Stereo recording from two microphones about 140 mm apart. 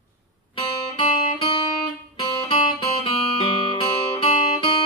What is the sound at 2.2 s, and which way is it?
Guitar, 35° left (ahead or behind).